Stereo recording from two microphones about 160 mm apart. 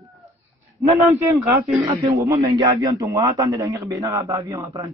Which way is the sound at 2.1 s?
20° right (ahead or behind).